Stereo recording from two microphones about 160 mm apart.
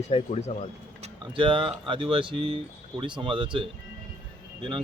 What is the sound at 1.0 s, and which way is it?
Speech, 30° right (ahead or behind).